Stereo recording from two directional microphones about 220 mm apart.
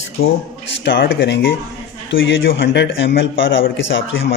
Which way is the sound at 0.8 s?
55° left (ahead or behind).